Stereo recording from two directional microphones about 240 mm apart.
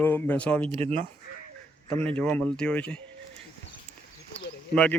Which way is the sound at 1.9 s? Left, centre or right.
Centre.